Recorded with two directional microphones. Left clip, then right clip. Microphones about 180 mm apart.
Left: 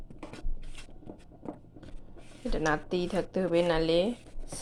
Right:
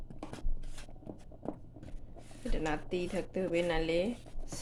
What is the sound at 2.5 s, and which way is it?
A woman's voice, 15° left (ahead or behind).